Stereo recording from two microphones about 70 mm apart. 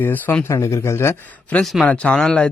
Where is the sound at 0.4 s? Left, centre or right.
Left.